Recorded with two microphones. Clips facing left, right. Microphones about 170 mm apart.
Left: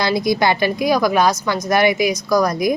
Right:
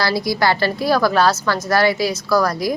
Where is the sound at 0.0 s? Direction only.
20° left (ahead or behind).